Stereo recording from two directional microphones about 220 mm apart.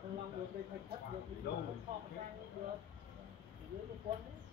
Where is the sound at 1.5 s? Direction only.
50° left (ahead or behind).